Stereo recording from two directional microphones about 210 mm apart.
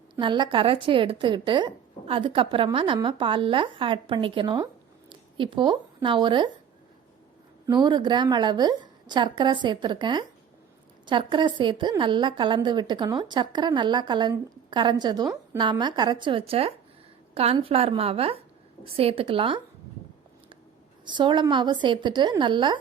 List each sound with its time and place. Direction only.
0.2 s a woman's voice: 20° right (ahead or behind)
7.7 s a woman's voice: 20° right (ahead or behind)
21.0 s a woman's voice: 20° right (ahead or behind)